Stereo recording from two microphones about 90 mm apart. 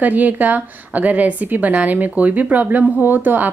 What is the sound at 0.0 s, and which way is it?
A woman's voice, 20° right (ahead or behind).